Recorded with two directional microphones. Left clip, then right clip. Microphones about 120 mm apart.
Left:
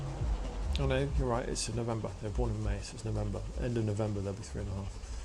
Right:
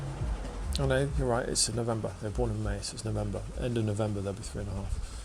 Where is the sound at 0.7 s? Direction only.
35° right (ahead or behind).